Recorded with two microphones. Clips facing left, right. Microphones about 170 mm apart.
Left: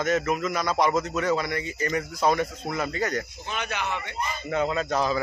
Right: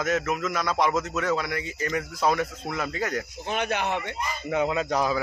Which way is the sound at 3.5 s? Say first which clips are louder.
Right 6 dB; 55° right (ahead or behind).